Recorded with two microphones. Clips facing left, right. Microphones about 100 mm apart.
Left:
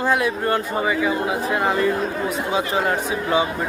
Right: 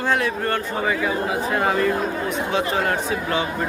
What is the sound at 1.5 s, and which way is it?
A man's voice, centre (ahead or behind).